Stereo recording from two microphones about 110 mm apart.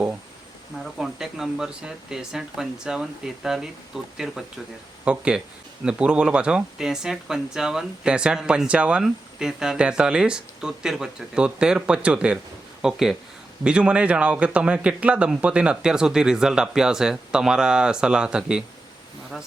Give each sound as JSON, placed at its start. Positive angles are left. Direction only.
{"t": 0.8, "sound": "speech", "side_deg": -5}